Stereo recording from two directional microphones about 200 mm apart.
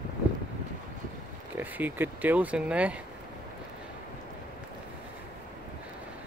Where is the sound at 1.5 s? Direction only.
10° right (ahead or behind).